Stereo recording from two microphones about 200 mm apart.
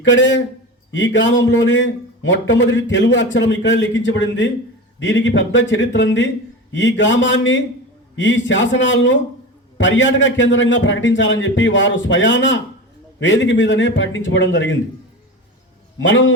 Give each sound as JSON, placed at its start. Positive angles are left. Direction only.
{"t": 0.0, "sound": "a man's voice", "side_deg": 65}
{"t": 16.0, "sound": "a man's voice", "side_deg": 70}